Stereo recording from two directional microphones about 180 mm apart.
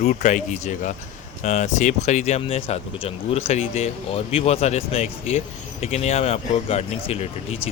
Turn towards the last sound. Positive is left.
turn(degrees=35)  # may be behind; listen again after turning